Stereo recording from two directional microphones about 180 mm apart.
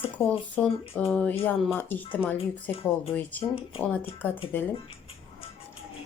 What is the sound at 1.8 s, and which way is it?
Speech, 10° left (ahead or behind).